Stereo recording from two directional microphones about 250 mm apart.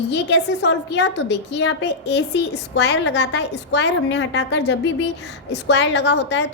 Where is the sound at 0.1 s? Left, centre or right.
Left.